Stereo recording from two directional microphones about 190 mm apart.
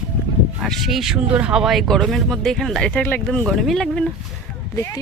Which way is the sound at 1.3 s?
5° right (ahead or behind).